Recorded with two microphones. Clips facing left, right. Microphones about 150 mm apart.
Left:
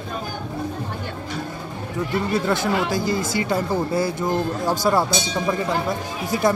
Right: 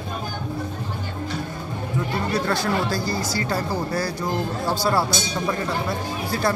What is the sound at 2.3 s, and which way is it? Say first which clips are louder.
Speech: left 1 dB; 20° left (ahead or behind).